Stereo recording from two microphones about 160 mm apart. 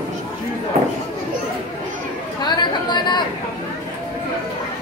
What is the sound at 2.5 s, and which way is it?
Chatter, 25° left (ahead or behind).